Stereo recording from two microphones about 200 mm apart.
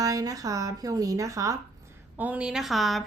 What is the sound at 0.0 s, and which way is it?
A woman's voice, 20° right (ahead or behind).